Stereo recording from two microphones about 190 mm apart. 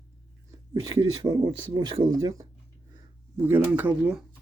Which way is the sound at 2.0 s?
90° right.